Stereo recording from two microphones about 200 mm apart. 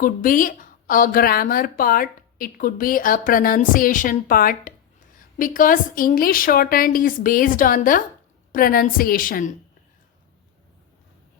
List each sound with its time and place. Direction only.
0.0 s a woman's voice: 45° left (ahead or behind)